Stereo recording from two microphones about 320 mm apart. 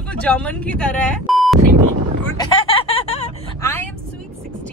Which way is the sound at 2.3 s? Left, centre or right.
Centre.